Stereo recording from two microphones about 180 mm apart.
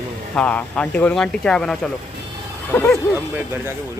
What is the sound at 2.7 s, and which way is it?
Speech, 15° left (ahead or behind).